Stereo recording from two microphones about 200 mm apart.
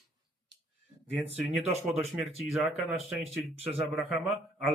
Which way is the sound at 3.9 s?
Centre (ahead or behind).